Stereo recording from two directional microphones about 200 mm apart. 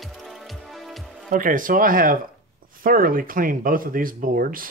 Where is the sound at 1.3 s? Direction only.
40° right (ahead or behind).